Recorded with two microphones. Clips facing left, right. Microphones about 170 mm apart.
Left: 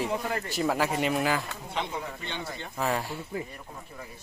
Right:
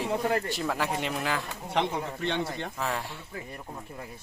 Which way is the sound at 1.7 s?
70° right (ahead or behind).